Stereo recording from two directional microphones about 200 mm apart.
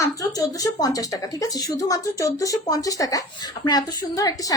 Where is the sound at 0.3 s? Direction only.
20° left (ahead or behind).